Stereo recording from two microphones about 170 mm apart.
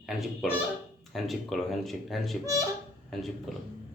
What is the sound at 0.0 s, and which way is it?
Speech, centre (ahead or behind).